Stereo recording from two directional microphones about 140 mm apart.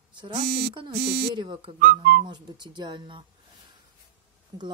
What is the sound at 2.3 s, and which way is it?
Speech, 30° right (ahead or behind).